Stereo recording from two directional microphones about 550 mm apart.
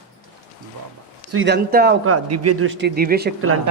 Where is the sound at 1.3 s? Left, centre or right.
Centre.